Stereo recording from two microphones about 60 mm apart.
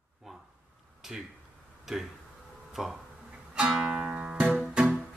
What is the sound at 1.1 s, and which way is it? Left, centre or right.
Speech, centre.